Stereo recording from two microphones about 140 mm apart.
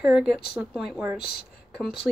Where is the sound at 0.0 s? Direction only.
5° right (ahead or behind).